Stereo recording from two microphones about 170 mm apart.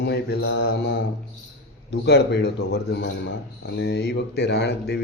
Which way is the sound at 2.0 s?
80° left.